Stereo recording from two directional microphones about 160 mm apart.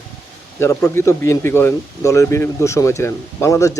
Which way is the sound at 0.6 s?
15° left (ahead or behind).